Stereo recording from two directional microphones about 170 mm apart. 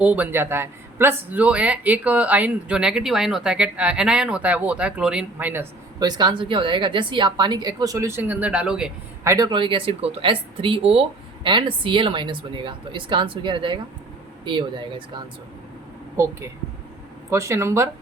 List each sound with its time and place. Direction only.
0.0 s speech: 10° right (ahead or behind)
6.0 s a woman's voice: 25° right (ahead or behind); by 8.9 s 5° right (ahead or behind)
9.2 s a woman's voice: 20° right (ahead or behind)
16.1 s speech: 15° right (ahead or behind)